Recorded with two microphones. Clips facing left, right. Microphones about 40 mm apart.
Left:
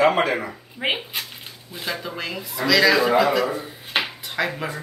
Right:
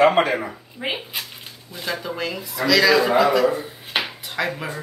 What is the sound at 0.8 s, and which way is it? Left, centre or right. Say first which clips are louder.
Speech: left 3 dB; left.